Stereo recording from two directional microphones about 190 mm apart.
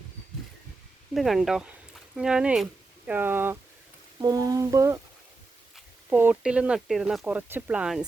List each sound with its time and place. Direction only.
1.1 s speech: centre (ahead or behind)
3.1 s a sound: 10° right (ahead or behind)
5.7 s speech: 10° right (ahead or behind)